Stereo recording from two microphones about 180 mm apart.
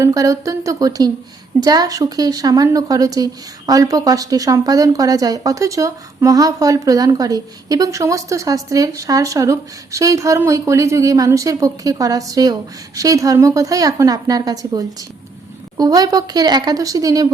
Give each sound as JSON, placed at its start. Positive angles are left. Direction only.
{"t": 0.0, "sound": "speech", "side_deg": -20}